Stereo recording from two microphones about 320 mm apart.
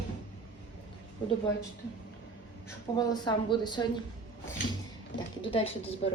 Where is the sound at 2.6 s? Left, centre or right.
Centre.